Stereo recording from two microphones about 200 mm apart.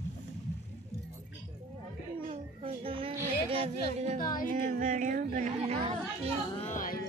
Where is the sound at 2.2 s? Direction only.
25° right (ahead or behind).